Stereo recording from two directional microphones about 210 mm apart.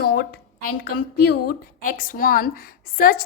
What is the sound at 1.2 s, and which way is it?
A woman's voice, 45° left (ahead or behind).